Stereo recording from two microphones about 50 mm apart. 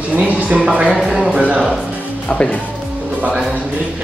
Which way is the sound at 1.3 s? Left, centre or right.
Right.